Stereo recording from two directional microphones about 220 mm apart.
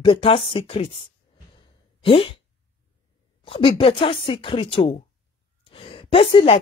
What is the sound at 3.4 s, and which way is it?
A woman's voice, 25° left (ahead or behind).